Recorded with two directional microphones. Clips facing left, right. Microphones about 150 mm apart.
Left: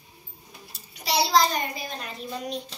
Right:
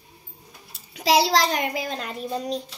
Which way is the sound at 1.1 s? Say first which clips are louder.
Right 3 dB; 90° right.